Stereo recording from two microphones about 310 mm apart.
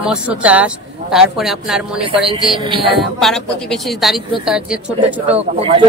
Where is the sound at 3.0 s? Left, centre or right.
Centre.